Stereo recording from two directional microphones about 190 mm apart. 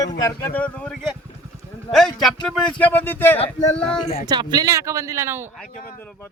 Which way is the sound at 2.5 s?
10° left (ahead or behind).